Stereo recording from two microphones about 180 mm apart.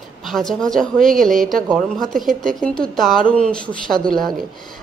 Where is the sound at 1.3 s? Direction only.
50° right (ahead or behind).